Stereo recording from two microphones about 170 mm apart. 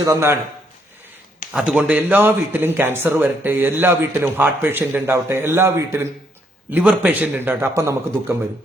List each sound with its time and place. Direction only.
0.0 s a man's voice: 15° right (ahead or behind)
1.5 s a man's voice: 5° right (ahead or behind)